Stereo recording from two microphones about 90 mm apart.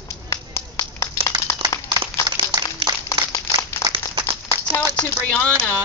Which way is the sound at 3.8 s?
30° left (ahead or behind).